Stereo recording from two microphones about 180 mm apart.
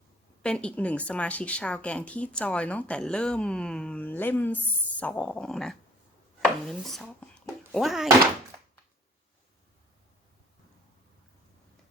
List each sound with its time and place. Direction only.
0.4 s speech: 5° left (ahead or behind)
6.4 s chopping: centre (ahead or behind)
7.7 s speech: centre (ahead or behind)